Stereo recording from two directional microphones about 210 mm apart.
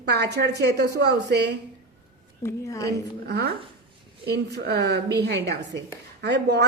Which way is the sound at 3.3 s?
50° right (ahead or behind).